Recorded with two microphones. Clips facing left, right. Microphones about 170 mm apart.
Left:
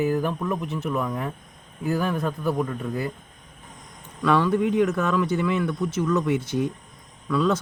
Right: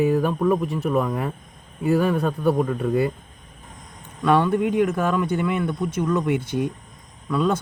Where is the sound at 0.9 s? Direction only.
60° right (ahead or behind).